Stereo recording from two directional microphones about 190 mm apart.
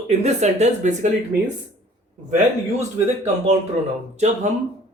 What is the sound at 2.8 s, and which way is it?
Speech, 35° right (ahead or behind).